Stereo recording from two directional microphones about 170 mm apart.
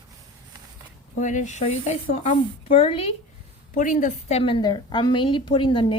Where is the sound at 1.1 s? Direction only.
45° left (ahead or behind).